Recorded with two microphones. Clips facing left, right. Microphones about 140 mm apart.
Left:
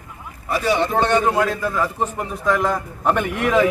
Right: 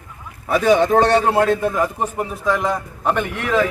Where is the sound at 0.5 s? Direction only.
50° right (ahead or behind); by 2.0 s 20° right (ahead or behind).